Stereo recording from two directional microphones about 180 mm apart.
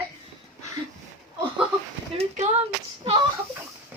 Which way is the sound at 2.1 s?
35° right (ahead or behind).